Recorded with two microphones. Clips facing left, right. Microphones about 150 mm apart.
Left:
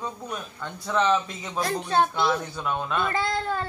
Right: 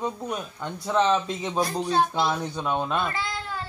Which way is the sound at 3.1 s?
50° left (ahead or behind).